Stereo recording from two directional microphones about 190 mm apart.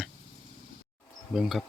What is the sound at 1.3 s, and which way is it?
Speech, centre (ahead or behind).